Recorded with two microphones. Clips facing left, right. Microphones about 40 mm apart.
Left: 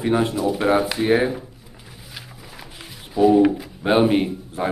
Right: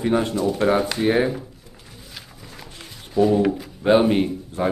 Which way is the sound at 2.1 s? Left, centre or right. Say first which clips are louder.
Left 2 dB; centre.